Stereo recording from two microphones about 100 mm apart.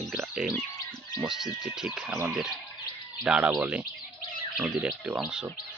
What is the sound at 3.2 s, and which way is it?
Speech, 10° right (ahead or behind).